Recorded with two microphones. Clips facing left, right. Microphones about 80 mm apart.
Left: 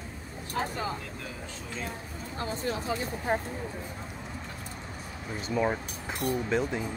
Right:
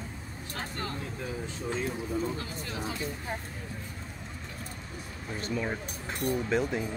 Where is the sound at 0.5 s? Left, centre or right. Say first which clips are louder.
Left 5 dB; centre.